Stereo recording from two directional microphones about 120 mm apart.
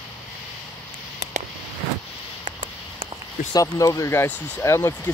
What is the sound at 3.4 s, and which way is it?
Speech, 85° left.